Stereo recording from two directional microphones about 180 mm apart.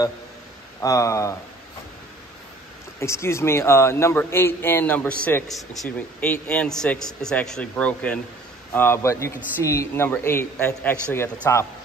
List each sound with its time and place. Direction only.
0.7 s a man's voice: 15° left (ahead or behind)
3.0 s a man's voice: 15° left (ahead or behind)